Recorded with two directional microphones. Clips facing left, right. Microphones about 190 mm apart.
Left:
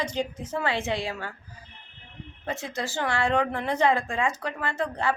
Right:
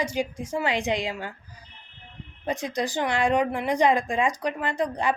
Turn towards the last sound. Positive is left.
turn(degrees=-15)  # may be behind; listen again after turning